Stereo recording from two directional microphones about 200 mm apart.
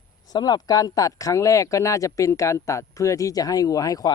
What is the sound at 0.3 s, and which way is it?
Speech, 20° left (ahead or behind).